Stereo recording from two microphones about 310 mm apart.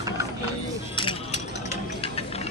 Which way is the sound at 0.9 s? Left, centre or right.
Centre.